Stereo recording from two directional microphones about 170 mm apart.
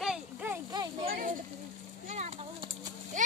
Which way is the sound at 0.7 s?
25° right (ahead or behind).